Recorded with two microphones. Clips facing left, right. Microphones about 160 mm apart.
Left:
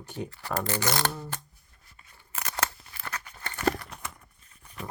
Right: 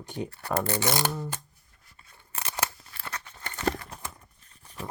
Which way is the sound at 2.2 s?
20° right (ahead or behind).